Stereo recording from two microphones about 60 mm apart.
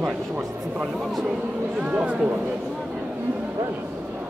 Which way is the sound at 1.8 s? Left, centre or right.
Centre.